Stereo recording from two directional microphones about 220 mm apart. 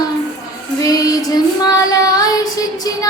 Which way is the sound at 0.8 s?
15° left (ahead or behind).